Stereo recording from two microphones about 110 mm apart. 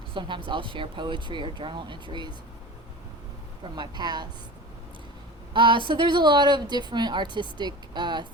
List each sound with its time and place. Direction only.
0.1 s speech: 50° right (ahead or behind)
3.6 s speech: 40° right (ahead or behind)
5.5 s speech: 50° right (ahead or behind)